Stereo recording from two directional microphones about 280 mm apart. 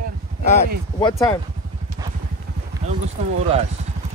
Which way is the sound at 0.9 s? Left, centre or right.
Centre.